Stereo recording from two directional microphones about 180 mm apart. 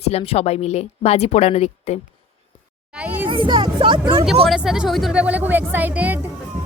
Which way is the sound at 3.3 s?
25° right (ahead or behind).